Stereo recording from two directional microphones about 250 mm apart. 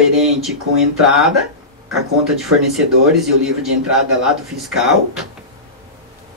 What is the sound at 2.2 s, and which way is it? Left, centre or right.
Speech, centre.